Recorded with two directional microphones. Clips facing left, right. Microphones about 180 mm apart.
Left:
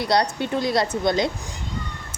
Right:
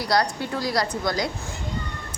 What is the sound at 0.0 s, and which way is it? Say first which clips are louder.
A woman's voice: left 2 dB; 25° left (ahead or behind).